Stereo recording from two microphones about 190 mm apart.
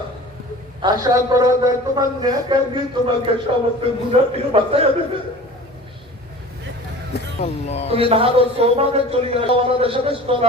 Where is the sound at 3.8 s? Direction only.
30° right (ahead or behind).